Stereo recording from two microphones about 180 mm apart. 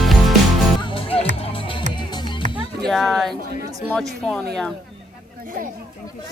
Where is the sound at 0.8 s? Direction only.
30° left (ahead or behind).